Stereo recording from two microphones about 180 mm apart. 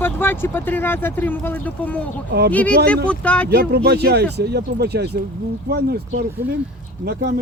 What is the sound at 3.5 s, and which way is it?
Speech, 65° right (ahead or behind).